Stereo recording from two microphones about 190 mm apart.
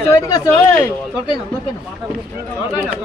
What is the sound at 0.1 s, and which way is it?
Speech, 15° left (ahead or behind).